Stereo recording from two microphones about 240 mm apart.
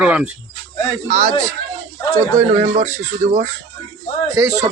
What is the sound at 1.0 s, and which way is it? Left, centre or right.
Speech, right.